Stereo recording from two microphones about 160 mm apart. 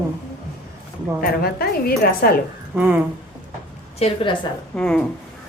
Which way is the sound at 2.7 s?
10° right (ahead or behind).